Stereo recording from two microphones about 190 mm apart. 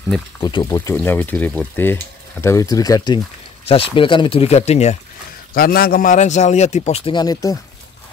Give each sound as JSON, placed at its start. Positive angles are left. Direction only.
{"t": 0.4, "sound": "speech", "side_deg": 25}
{"t": 0.7, "sound": "speech", "side_deg": 15}
{"t": 3.6, "sound": "a man's voice", "side_deg": 30}
{"t": 5.5, "sound": "a man's voice", "side_deg": 50}